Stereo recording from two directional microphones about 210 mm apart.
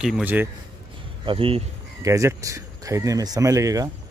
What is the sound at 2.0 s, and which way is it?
Speech, 15° right (ahead or behind).